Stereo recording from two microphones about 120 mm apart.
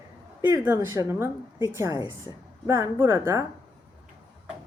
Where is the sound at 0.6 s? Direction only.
25° right (ahead or behind).